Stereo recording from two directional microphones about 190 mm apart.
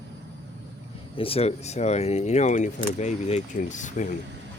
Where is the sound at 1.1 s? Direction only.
30° left (ahead or behind).